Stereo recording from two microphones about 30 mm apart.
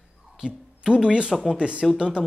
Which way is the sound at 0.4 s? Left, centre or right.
Right.